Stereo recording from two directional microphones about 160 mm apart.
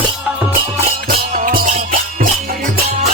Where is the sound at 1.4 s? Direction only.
60° right (ahead or behind).